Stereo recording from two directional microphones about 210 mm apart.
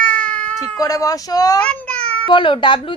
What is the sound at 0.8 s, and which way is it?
Speech, 15° left (ahead or behind).